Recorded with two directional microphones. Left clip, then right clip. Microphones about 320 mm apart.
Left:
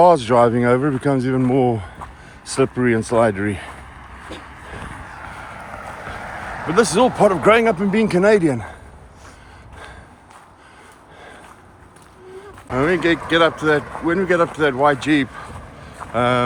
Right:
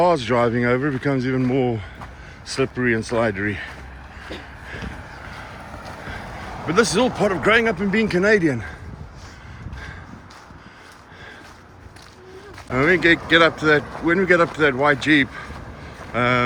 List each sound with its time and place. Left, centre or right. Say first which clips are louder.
0.0 s speech: left 5 dB; centre
6.7 s speech: left 3 dB; centre
12.7 s speech: right 1 dB; centre